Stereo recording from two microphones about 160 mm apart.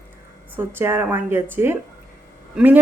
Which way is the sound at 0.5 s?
15° right (ahead or behind).